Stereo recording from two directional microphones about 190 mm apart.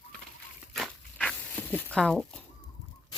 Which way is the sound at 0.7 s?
Centre (ahead or behind).